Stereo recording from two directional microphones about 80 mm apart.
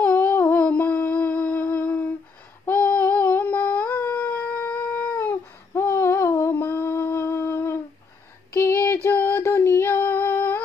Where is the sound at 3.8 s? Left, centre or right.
Left.